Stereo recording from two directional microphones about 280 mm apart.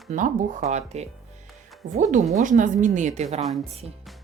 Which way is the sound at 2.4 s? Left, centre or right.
Right.